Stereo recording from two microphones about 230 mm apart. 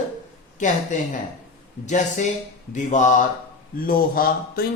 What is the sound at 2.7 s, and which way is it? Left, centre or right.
Speech, left.